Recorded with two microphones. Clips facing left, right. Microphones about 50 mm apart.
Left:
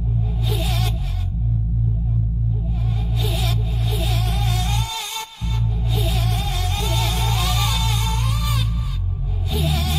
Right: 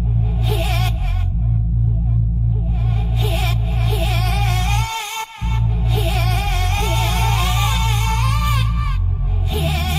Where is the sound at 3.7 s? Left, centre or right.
Right.